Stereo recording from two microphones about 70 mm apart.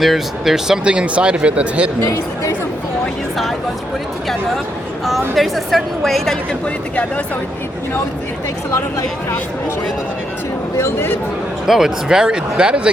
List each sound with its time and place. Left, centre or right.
0.0 s speech: centre
2.0 s speech: left
5.3 s a woman's voice: centre
10.8 s speech: left
11.6 s speech: centre